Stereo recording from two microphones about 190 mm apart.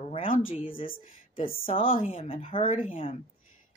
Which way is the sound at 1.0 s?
30° left (ahead or behind).